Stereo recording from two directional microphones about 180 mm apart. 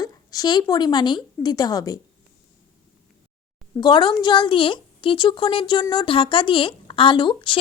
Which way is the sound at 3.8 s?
25° left (ahead or behind).